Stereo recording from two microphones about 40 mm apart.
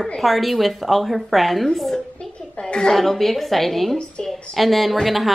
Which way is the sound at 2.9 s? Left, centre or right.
Centre.